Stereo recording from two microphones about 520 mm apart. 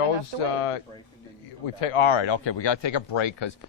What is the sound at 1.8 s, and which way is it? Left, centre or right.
Speech, left.